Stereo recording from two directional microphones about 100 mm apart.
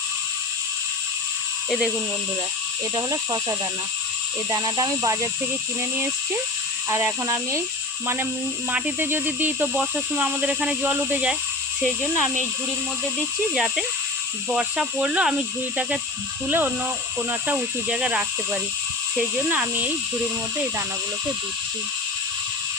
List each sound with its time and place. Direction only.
2.9 s speech: 40° right (ahead or behind)
4.5 s speech: 35° right (ahead or behind)
6.9 s speech: 30° right (ahead or behind)
8.7 s speech: 20° right (ahead or behind)
11.8 s speech: centre (ahead or behind)
13.5 s speech: 5° right (ahead or behind)